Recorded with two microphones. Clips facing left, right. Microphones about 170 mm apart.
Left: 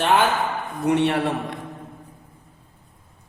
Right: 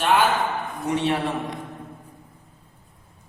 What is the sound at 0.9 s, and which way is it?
Speech, 65° left (ahead or behind).